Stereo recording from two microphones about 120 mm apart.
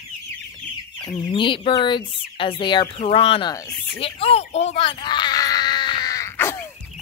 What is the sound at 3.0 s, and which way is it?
Speech, 55° left (ahead or behind).